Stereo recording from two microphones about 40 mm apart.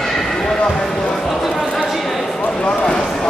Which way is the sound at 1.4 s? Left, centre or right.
Centre.